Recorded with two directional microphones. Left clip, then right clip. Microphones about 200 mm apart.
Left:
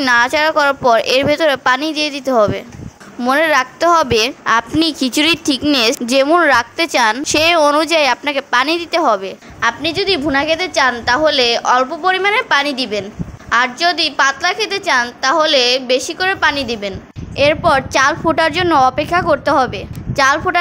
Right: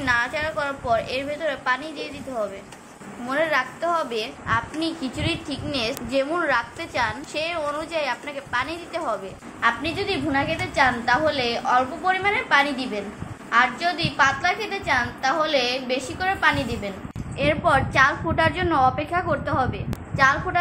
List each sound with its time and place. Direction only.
0.0 s a woman's voice: 55° left (ahead or behind)